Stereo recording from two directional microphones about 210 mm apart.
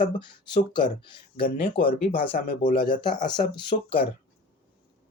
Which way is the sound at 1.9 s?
45° left (ahead or behind).